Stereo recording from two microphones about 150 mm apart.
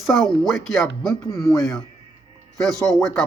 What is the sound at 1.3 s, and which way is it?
Speech, 20° left (ahead or behind).